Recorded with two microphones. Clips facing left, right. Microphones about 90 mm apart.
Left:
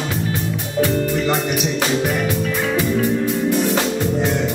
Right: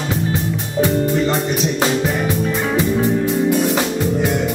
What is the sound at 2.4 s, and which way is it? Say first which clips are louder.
Music: right 2 dB; 25° right (ahead or behind).